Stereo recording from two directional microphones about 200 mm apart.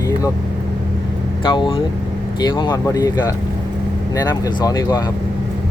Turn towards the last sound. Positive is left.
turn(degrees=20)  # may be behind; listen again after turning